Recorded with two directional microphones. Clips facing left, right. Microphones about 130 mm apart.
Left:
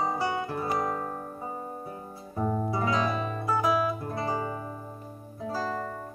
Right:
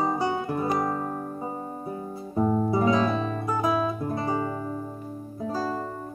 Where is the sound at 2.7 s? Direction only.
20° right (ahead or behind).